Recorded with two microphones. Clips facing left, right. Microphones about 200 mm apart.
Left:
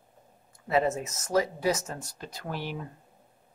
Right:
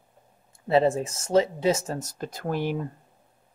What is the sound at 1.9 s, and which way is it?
Speech, 45° right (ahead or behind).